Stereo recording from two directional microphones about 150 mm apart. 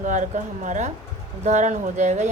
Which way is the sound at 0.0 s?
55° right (ahead or behind).